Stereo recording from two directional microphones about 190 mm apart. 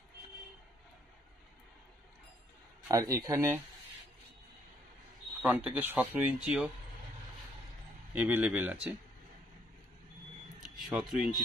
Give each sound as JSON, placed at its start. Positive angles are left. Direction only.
{"t": 2.9, "sound": "speech", "side_deg": -15}
{"t": 5.4, "sound": "speech", "side_deg": -10}
{"t": 8.1, "sound": "speech", "side_deg": -10}
{"t": 10.8, "sound": "speech", "side_deg": 0}